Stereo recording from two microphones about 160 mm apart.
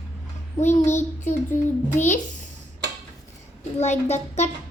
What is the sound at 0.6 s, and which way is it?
A child's voice, 50° left (ahead or behind).